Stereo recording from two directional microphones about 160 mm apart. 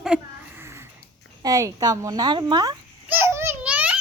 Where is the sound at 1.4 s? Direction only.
20° right (ahead or behind).